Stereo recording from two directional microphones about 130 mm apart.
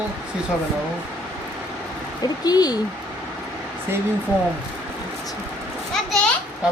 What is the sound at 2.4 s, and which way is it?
Speech, 30° left (ahead or behind).